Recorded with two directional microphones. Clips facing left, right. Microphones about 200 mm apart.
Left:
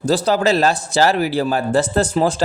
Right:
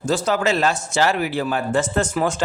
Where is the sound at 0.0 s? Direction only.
35° left (ahead or behind).